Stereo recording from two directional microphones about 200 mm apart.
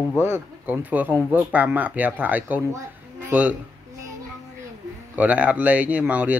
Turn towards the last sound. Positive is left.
turn(degrees=-10)  # may be behind; listen again after turning